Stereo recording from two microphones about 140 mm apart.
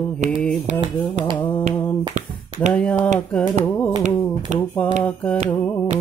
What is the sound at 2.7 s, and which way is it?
Mantra, 10° left (ahead or behind).